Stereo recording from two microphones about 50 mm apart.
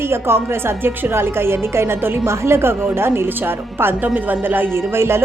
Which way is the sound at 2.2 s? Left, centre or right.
Right.